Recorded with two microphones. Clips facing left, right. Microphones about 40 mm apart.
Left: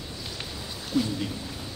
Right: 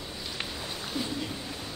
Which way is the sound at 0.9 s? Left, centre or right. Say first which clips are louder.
Left 8 dB; centre.